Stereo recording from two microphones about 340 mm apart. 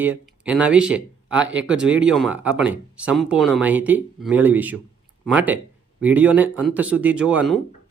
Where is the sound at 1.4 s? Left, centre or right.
Right.